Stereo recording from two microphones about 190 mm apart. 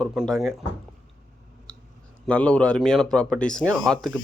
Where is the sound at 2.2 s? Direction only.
5° left (ahead or behind).